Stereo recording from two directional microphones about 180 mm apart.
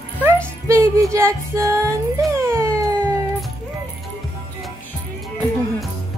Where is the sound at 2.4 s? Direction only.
15° right (ahead or behind).